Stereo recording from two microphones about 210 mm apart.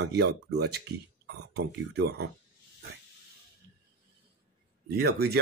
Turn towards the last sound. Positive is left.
turn(degrees=-50)  # may be behind; listen again after turning